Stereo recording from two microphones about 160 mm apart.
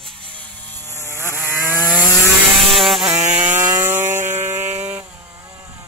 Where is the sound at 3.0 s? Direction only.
15° right (ahead or behind).